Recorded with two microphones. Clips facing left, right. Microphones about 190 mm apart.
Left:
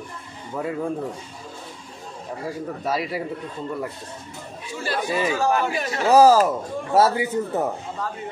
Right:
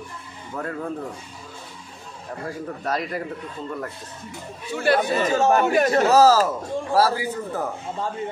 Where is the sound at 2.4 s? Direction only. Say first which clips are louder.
Left 1 dB; 5° left (ahead or behind).